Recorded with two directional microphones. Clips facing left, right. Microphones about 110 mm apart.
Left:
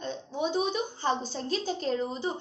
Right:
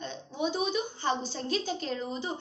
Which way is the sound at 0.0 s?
35° left (ahead or behind).